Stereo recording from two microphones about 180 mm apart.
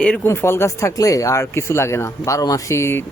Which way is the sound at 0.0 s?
10° left (ahead or behind).